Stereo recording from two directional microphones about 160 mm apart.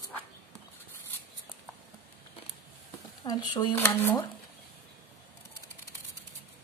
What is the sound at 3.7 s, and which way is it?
Speech, 15° left (ahead or behind).